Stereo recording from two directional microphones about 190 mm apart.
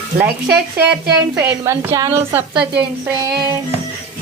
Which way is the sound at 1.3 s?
10° right (ahead or behind).